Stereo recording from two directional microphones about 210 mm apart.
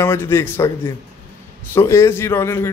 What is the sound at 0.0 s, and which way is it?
Speech, 10° left (ahead or behind).